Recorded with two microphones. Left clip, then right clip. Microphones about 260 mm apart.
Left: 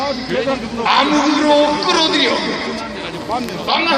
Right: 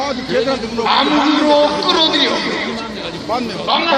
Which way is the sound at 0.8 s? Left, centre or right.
Left.